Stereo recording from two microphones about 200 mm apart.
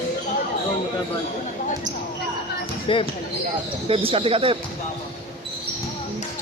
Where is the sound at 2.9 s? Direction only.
25° left (ahead or behind).